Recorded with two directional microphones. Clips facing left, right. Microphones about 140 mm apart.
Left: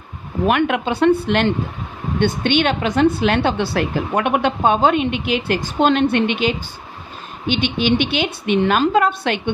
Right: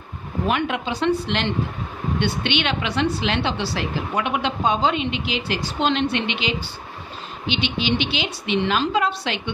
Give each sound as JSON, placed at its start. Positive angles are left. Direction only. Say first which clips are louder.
{"t": 0.5, "sound": "a woman's voice", "louder": "left 6 dB", "side_deg": 60}